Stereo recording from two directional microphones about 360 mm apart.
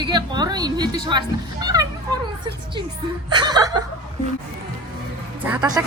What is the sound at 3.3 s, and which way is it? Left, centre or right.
Speech, centre.